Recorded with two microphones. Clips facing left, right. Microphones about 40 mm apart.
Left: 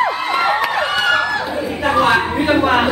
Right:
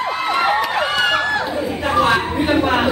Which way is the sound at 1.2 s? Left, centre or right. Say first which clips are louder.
Even; centre.